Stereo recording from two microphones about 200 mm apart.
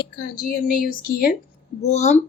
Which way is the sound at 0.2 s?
45° left (ahead or behind).